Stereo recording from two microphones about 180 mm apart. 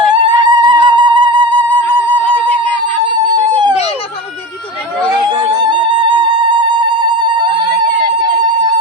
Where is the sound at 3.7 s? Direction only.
35° left (ahead or behind).